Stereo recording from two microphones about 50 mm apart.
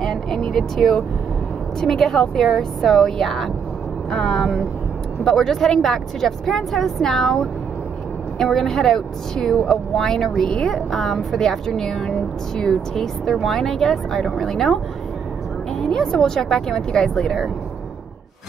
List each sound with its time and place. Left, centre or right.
0.0 s vehicle: centre
0.5 s speech: centre
15.8 s speech: centre